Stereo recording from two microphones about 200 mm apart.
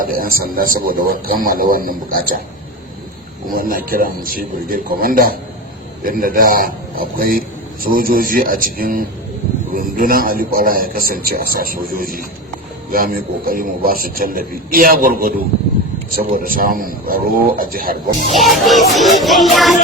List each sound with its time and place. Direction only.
0.0 s a man's voice: 45° right (ahead or behind)
3.5 s a man's voice: 45° right (ahead or behind)
18.3 s music: centre (ahead or behind)